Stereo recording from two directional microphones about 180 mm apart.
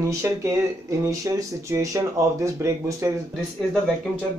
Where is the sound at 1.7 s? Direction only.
15° right (ahead or behind).